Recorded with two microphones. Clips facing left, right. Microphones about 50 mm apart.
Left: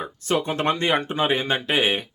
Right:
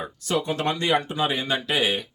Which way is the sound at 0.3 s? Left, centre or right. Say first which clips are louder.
Left 2 dB; left.